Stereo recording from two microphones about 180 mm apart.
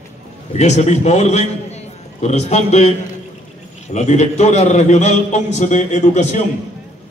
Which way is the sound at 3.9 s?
40° left (ahead or behind).